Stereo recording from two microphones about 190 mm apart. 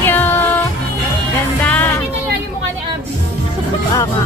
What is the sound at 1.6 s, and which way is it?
Music, 10° left (ahead or behind).